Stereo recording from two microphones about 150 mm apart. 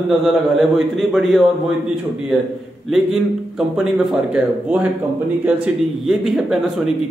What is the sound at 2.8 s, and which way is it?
A man's voice, centre (ahead or behind).